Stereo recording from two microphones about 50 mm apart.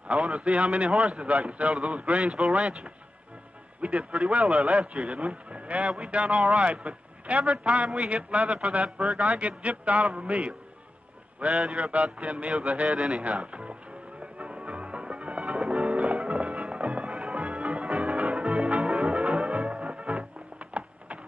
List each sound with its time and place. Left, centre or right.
0.3 s speech: right
0.7 s speech: centre
10.0 s a man's voice: centre
11.6 s mantra: centre
11.9 s speech: right
14.4 s music: right
18.5 s music: centre; by 21.2 s right